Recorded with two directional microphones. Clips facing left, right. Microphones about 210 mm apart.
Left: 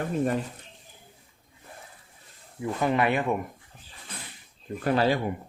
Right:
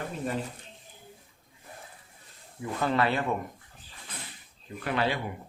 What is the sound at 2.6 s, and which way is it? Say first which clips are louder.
Speech: left 2 dB; 15° left (ahead or behind).